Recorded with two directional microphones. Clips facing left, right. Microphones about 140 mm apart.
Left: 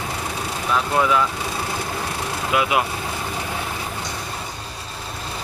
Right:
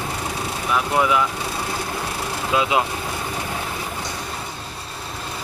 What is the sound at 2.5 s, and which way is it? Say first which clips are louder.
Speech: even; 25° right (ahead or behind).